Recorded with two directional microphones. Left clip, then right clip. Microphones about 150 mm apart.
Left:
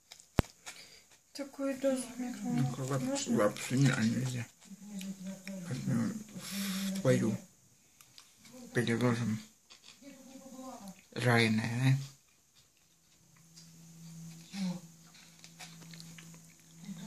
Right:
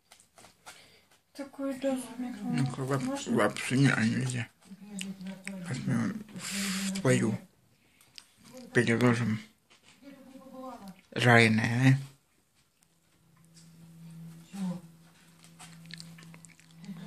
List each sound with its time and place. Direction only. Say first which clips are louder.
1.3 s speech: right 1 dB; 5° right (ahead or behind)
4.9 s a sound: right 4 dB; 10° right (ahead or behind)
8.7 s speech: right 6 dB; 20° right (ahead or behind)
10.9 s speech: right 8 dB; 25° right (ahead or behind)
15.9 s dog: right 11 dB; 25° right (ahead or behind)